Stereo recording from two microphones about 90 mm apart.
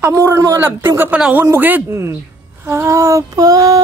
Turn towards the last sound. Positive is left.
turn(degrees=-40)  # may be behind; listen again after turning